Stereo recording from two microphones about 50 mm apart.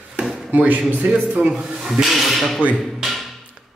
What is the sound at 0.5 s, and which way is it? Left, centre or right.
Speech, right.